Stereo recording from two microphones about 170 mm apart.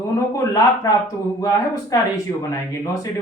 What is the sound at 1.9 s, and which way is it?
Speech, 20° left (ahead or behind).